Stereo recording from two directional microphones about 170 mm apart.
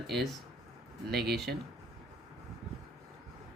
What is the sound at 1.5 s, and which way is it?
Speech, 60° right (ahead or behind).